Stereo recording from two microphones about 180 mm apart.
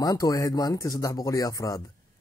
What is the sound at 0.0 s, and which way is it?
A man's voice, 20° left (ahead or behind).